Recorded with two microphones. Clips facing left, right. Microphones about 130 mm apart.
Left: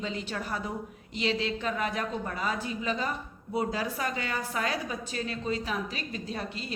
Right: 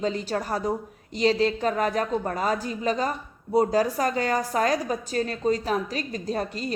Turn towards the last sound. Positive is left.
turn(degrees=-40)  # may be behind; listen again after turning